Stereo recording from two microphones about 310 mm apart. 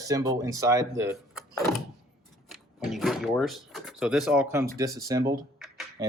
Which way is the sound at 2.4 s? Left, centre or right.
Centre.